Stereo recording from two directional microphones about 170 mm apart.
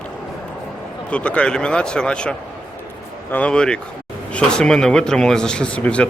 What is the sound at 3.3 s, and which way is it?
Speech, 5° left (ahead or behind).